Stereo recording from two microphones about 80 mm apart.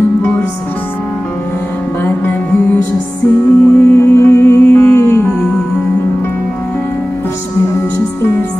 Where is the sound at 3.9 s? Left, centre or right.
Left.